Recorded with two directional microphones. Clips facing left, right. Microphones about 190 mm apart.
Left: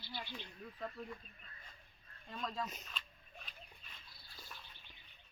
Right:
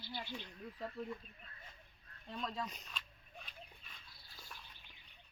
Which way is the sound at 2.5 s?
Centre (ahead or behind).